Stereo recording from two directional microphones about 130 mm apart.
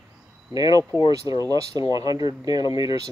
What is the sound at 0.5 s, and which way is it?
Speech, 30° right (ahead or behind).